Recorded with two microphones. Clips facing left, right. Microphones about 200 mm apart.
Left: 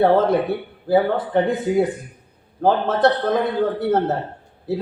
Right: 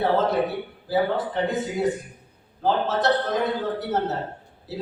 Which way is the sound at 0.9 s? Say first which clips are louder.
Left 5 dB; 55° left (ahead or behind).